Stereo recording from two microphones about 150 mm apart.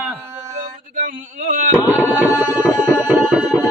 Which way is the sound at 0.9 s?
55° right (ahead or behind).